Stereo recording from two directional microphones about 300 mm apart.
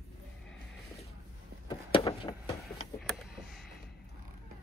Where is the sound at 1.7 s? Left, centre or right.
Centre.